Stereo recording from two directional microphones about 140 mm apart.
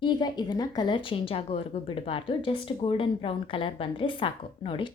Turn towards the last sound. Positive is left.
turn(degrees=35)  # may be behind; listen again after turning